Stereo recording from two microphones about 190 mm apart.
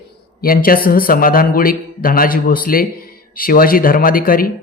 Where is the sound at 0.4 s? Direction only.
50° left (ahead or behind).